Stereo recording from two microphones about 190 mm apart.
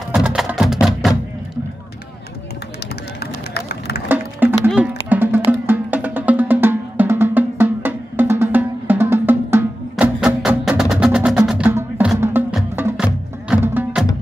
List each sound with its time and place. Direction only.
0.1 s music: 5° right (ahead or behind)
3.5 s run: 60° left (ahead or behind)
4.1 s music: 10° right (ahead or behind)